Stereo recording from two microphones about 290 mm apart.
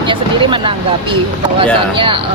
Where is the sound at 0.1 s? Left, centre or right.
Centre.